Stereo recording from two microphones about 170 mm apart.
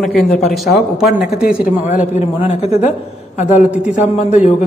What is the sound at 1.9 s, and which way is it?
A woman's voice, 50° left (ahead or behind).